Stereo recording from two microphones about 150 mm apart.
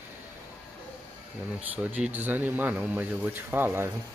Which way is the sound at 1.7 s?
10° right (ahead or behind).